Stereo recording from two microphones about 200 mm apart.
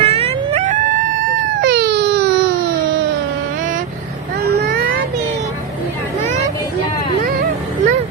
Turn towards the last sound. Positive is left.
turn(degrees=-45)  # may be behind; listen again after turning